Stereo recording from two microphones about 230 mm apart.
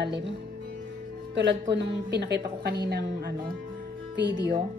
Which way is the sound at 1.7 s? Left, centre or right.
Right.